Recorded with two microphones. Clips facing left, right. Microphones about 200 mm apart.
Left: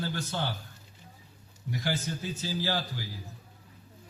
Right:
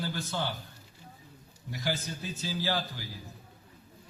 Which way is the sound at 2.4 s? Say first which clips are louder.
Right 1 dB; 15° left (ahead or behind).